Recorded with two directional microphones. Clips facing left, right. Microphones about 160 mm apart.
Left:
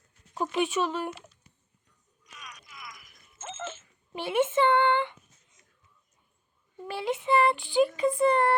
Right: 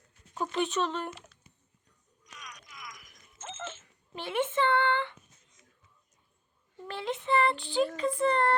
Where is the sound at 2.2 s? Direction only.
5° left (ahead or behind).